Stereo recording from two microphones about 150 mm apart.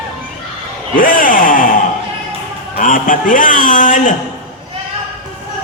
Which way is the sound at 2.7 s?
65° left (ahead or behind).